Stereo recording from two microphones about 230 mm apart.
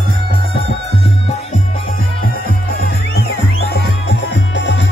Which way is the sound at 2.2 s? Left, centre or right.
Left.